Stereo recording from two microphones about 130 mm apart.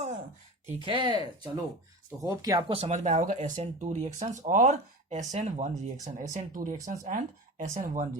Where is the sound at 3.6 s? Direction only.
50° right (ahead or behind).